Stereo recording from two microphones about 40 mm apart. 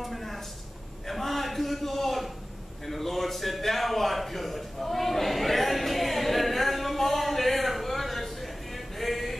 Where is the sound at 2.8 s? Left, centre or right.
Centre.